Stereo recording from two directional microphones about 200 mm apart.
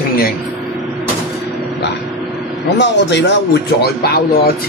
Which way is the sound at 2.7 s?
60° left (ahead or behind).